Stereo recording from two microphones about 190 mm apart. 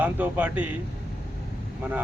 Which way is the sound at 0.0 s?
10° right (ahead or behind).